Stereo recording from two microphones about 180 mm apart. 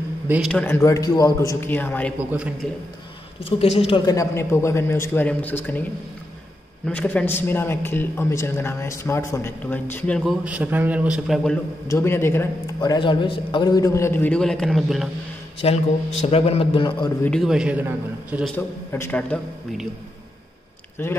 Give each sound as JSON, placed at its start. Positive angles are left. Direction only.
{"t": 0.5, "sound": "a man's voice", "side_deg": 5}
{"t": 0.8, "sound": "a man's voice", "side_deg": 20}
{"t": 3.4, "sound": "a man's voice", "side_deg": 35}
{"t": 6.9, "sound": "a man's voice", "side_deg": 10}
{"t": 10.4, "sound": "a man's voice", "side_deg": -5}
{"t": 11.9, "sound": "a man's voice", "side_deg": 15}
{"t": 15.6, "sound": "a man's voice", "side_deg": 35}
{"t": 17.2, "sound": "a man's voice", "side_deg": 0}
{"t": 18.9, "sound": "a man's voice", "side_deg": 15}
{"t": 21.0, "sound": "a man's voice", "side_deg": 15}